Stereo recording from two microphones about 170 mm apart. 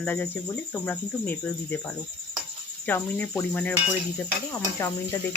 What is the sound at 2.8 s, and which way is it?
Speech, 10° left (ahead or behind).